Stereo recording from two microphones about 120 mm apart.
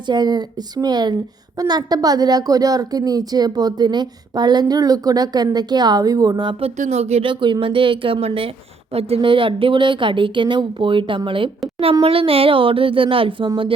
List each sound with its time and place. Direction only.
0.1 s a woman's voice: 35° right (ahead or behind)
6.7 s speech: 70° right (ahead or behind); by 13.5 s 45° right (ahead or behind)